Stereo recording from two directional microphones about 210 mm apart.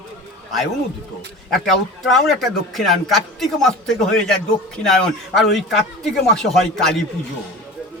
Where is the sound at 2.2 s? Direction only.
Centre (ahead or behind).